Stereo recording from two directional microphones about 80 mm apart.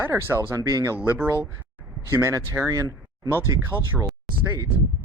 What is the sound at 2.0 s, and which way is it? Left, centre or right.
Speech, right.